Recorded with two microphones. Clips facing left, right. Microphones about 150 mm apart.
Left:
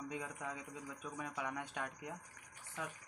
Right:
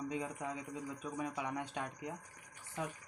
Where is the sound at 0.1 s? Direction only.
15° right (ahead or behind).